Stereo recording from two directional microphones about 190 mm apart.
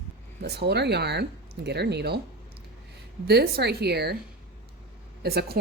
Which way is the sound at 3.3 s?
60° right (ahead or behind).